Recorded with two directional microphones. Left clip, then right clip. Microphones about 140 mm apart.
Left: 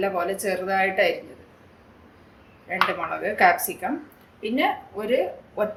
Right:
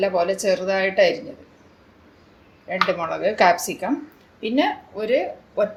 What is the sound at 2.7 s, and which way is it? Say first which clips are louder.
Speech: right 2 dB; 50° right (ahead or behind).